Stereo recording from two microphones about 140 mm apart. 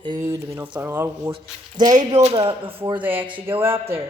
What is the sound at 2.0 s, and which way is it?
Speech, 50° right (ahead or behind).